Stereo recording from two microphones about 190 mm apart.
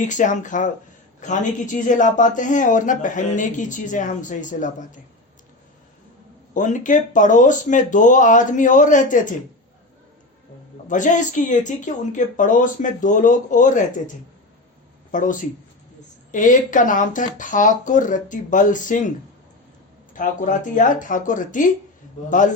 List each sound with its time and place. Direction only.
0.0 s speech: 40° left (ahead or behind)
6.5 s speech: 40° left (ahead or behind)
10.8 s speech: 40° left (ahead or behind)
15.1 s speech: 45° left (ahead or behind)
20.1 s speech: 45° left (ahead or behind)